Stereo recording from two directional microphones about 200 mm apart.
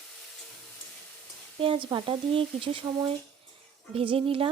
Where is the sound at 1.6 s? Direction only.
25° right (ahead or behind).